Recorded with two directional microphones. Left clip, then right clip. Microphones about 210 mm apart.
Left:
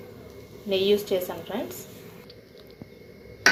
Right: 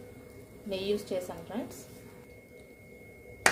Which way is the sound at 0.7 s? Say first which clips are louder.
Left 10 dB; centre (ahead or behind).